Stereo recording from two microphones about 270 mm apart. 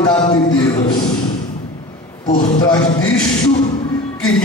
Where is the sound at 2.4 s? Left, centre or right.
Centre.